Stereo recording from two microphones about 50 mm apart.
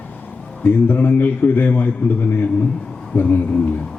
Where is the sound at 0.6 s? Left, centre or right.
Left.